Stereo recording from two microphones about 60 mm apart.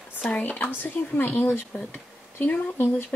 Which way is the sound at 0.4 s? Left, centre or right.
Left.